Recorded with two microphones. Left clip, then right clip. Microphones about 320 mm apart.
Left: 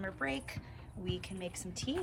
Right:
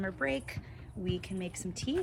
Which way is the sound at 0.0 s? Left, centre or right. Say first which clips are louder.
Right 4 dB; centre.